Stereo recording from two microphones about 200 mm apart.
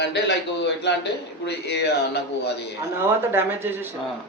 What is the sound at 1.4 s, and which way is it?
Speech, 55° left (ahead or behind).